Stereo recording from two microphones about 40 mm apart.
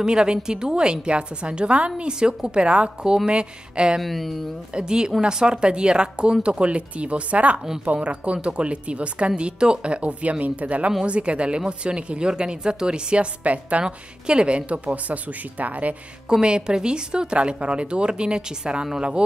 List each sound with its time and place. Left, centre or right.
0.0 s a woman's voice: right
4.0 s speech: centre
4.7 s a woman's voice: centre; by 13.8 s right
13.8 s a woman's voice: right
16.3 s a woman's voice: right